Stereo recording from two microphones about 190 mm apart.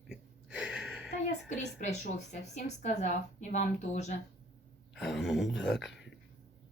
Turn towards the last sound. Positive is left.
turn(degrees=0)  # may be behind; listen again after turning